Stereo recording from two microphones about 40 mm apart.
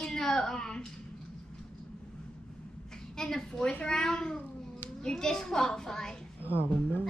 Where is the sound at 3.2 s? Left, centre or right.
Centre.